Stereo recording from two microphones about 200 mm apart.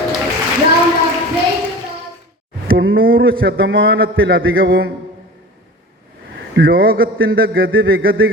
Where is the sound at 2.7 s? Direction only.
75° right (ahead or behind).